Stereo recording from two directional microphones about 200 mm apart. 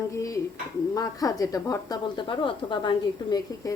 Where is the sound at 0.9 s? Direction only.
15° left (ahead or behind).